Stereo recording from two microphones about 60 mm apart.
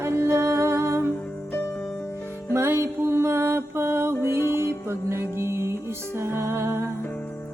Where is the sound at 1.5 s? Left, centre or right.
Left.